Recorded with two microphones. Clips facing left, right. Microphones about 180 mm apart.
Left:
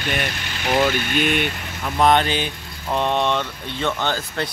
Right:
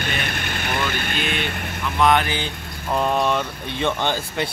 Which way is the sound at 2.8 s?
5° right (ahead or behind).